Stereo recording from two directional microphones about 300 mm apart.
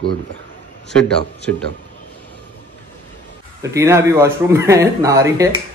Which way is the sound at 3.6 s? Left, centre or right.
Centre.